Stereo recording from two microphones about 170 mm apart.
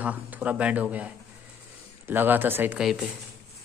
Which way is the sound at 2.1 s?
10° right (ahead or behind).